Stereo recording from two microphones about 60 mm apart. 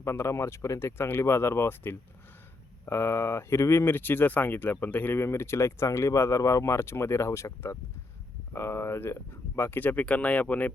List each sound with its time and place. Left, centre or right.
0.0 s speech: left
0.8 s speech: left
6.7 s speech: left